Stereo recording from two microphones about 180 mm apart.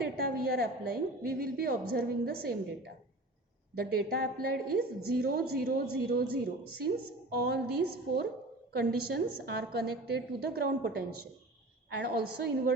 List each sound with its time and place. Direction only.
0.0 s a woman's voice: 55° right (ahead or behind)